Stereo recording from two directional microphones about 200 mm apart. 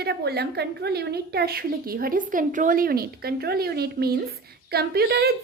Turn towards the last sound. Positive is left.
turn(degrees=-55)  # may be behind; listen again after turning